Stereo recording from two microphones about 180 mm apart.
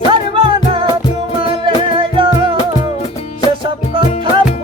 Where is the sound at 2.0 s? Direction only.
30° right (ahead or behind).